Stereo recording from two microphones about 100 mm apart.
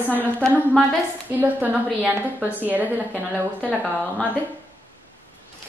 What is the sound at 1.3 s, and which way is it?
A woman's voice, 15° right (ahead or behind).